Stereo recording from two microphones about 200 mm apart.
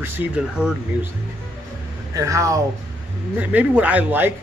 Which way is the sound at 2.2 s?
15° right (ahead or behind).